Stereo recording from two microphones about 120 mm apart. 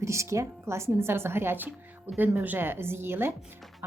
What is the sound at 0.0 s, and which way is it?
Speech, 25° right (ahead or behind).